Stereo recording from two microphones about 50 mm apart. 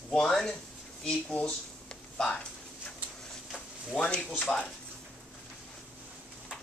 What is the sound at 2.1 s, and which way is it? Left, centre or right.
Speech, centre.